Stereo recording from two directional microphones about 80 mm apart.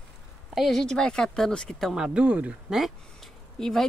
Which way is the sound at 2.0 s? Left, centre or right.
Centre.